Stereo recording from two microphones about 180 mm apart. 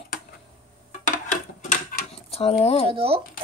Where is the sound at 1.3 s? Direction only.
40° left (ahead or behind).